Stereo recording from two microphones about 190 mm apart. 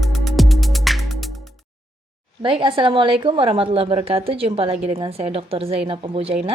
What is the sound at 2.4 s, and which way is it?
A woman's voice, 25° right (ahead or behind).